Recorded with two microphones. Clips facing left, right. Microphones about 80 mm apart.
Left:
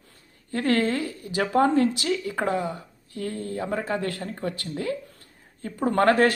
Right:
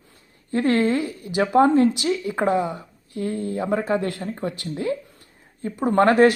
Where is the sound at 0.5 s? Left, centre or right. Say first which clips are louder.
Right 4 dB; right.